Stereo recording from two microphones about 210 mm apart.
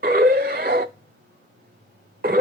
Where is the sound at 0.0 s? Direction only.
45° right (ahead or behind).